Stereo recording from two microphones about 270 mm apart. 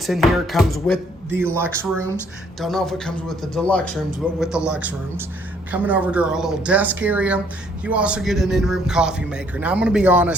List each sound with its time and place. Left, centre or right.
0.0 s a man's voice: centre
2.6 s a man's voice: centre